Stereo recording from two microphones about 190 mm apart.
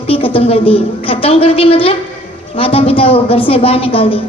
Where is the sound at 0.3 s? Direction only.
30° left (ahead or behind).